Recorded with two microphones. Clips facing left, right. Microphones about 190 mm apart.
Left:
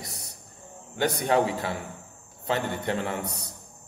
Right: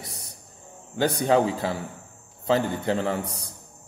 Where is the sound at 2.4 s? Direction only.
30° right (ahead or behind).